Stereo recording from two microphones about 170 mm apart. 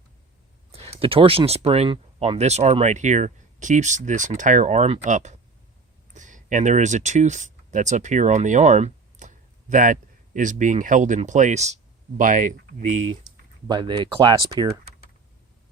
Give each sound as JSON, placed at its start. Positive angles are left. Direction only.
{"t": 0.7, "sound": "speech", "side_deg": -35}
{"t": 13.7, "sound": "speech", "side_deg": -25}